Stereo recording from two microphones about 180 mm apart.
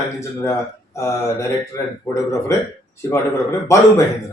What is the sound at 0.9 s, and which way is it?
Speech, 15° left (ahead or behind).